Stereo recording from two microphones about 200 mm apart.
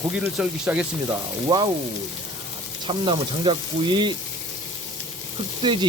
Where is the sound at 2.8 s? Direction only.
25° right (ahead or behind).